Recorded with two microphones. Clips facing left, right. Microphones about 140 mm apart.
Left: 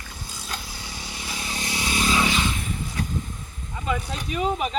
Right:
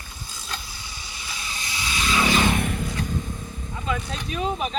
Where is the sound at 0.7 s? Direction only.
90° left; by 2.1 s 50° left (ahead or behind).